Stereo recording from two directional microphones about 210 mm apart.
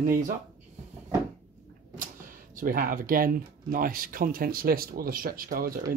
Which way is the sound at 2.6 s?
45° right (ahead or behind).